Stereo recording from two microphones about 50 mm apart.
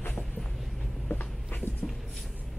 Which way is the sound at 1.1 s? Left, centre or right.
Left.